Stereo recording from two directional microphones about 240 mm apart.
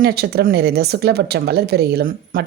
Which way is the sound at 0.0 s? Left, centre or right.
Right.